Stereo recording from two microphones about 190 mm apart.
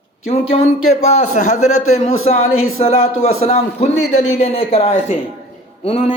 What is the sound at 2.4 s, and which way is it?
Speech, 90° left.